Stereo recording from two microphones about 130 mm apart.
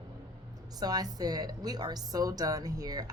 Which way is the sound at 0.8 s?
30° right (ahead or behind).